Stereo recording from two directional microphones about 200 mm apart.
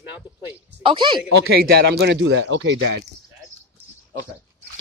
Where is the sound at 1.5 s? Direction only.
55° right (ahead or behind).